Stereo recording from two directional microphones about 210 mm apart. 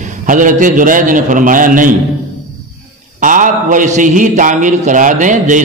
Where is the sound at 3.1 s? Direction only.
40° right (ahead or behind).